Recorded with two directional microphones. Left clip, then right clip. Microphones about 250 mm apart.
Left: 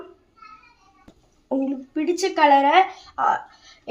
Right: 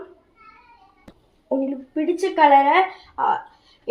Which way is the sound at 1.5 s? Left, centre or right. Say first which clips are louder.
Right 1 dB; left.